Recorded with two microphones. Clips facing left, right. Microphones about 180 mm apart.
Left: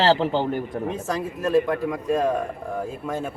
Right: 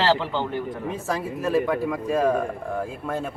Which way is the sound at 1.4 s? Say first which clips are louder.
Left 2 dB; 5° right (ahead or behind).